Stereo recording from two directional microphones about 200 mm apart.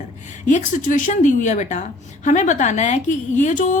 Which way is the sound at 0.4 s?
40° left (ahead or behind).